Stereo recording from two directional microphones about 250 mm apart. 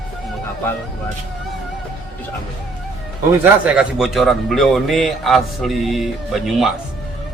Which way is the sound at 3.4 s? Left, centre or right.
Centre.